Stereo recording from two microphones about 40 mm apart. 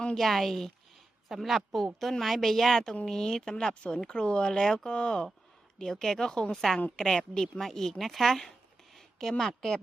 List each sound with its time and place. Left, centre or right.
0.2 s a woman's voice: centre